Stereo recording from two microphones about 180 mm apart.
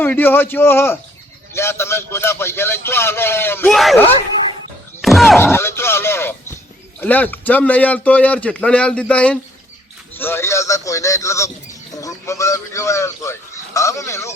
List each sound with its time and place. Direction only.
0.0 s a man's voice: 10° left (ahead or behind)
5.0 s speech: centre (ahead or behind)
5.4 s a man's voice: 15° left (ahead or behind)
10.2 s bird: 10° left (ahead or behind)